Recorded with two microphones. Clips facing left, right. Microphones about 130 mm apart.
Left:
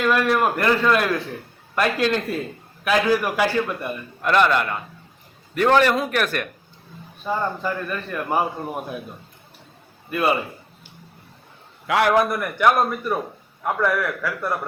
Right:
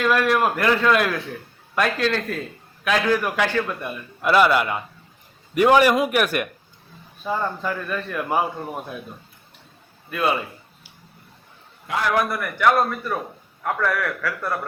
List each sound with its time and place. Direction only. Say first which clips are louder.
0.0 s a man's voice: even; centre (ahead or behind)
7.3 s a man's voice: left 1 dB; centre (ahead or behind)
10.1 s a man's voice: left 2 dB; 5° left (ahead or behind)
11.9 s a man's voice: left 5 dB; 70° left (ahead or behind)
12.1 s a man's voice: left 3 dB; 20° left (ahead or behind)